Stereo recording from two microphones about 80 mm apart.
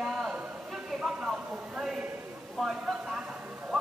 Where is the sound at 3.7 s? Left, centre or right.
Centre.